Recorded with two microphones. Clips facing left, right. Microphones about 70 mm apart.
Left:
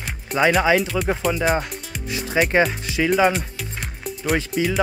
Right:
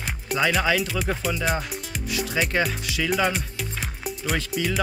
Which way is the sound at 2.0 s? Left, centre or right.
Left.